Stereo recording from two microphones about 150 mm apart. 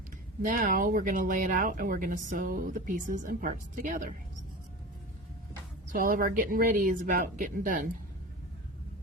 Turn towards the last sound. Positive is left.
turn(degrees=-65)  # may be behind; listen again after turning